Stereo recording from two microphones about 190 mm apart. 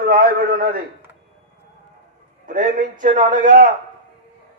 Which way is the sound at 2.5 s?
45° right (ahead or behind).